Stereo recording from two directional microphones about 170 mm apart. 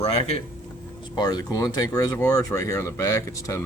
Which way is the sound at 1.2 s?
25° left (ahead or behind).